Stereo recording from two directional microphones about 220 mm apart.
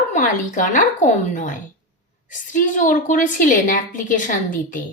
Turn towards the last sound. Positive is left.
turn(degrees=35)  # may be behind; listen again after turning